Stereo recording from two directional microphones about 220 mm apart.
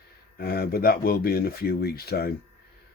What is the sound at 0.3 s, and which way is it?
Speech, 45° left (ahead or behind).